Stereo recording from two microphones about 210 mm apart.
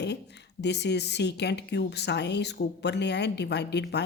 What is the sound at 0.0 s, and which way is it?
Speech, 55° left (ahead or behind).